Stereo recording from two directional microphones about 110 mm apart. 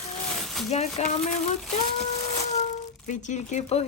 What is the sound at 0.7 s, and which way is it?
Speech, 85° left.